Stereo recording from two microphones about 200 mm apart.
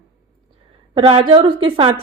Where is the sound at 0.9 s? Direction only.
30° right (ahead or behind).